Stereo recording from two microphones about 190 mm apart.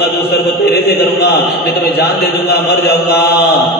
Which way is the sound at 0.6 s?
55° left (ahead or behind).